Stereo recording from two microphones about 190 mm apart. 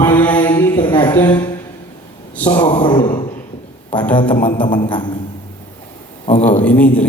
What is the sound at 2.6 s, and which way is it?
Speech, 25° left (ahead or behind).